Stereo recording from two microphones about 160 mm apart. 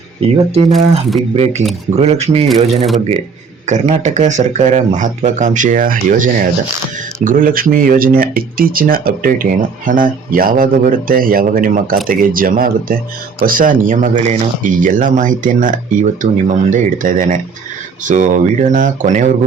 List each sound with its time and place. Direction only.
0.2 s speech: 35° right (ahead or behind)
0.7 s speech: centre (ahead or behind)
2.0 s speech: 40° right (ahead or behind)
2.5 s speech: centre (ahead or behind)
3.7 s speech: 45° right (ahead or behind)